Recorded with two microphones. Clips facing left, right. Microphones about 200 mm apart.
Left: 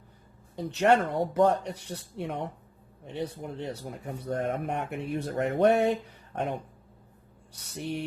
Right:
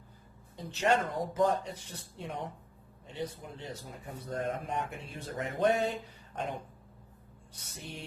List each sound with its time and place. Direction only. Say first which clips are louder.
0.5 s speech: left 6 dB; 65° left (ahead or behind)
7.7 s music: left 12 dB; 65° left (ahead or behind)